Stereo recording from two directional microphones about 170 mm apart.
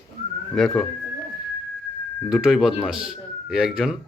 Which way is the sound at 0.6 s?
5° left (ahead or behind).